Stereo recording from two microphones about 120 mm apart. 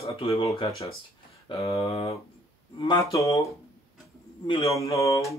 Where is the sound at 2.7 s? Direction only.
40° left (ahead or behind).